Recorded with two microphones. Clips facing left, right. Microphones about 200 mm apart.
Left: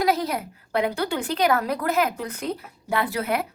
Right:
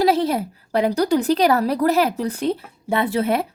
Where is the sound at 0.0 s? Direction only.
30° right (ahead or behind).